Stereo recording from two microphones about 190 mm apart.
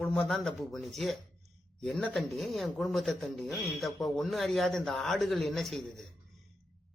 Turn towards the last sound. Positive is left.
turn(degrees=0)  # may be behind; listen again after turning